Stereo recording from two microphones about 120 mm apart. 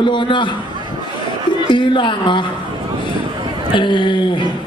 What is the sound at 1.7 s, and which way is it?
Speech, 45° left (ahead or behind).